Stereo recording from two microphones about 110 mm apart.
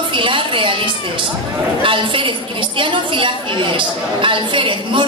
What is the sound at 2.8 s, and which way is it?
A woman's voice, 50° right (ahead or behind).